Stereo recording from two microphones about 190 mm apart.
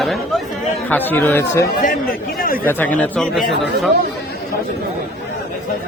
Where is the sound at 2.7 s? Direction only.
10° left (ahead or behind).